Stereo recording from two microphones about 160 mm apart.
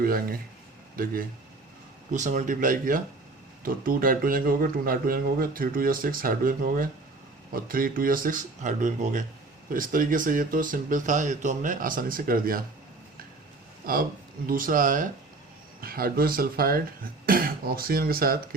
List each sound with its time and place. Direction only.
0.0 s speech: 65° right (ahead or behind)
2.1 s speech: 50° right (ahead or behind)
13.8 s speech: 65° right (ahead or behind)
15.8 s speech: 70° right (ahead or behind)